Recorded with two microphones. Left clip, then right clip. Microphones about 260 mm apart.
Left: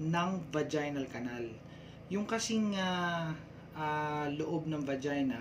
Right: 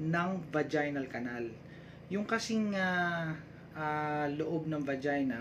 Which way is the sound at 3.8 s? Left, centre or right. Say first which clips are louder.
Right 1 dB; centre.